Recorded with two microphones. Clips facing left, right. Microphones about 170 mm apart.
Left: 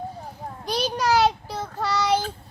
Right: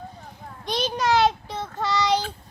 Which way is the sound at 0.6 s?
5° left (ahead or behind).